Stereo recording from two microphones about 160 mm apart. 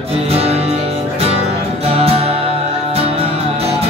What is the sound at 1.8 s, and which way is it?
Music, 40° right (ahead or behind).